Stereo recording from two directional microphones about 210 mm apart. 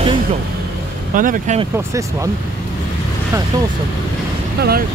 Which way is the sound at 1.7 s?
15° right (ahead or behind).